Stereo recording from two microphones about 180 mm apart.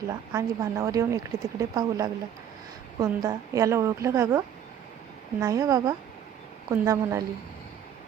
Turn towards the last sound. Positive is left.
turn(degrees=-15)  # may be behind; listen again after turning